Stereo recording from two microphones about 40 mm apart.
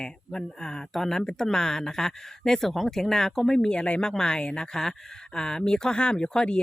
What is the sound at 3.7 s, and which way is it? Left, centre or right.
Speech, left.